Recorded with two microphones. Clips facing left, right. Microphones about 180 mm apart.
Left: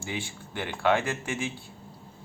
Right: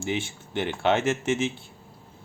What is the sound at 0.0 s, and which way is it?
Speech, 25° right (ahead or behind).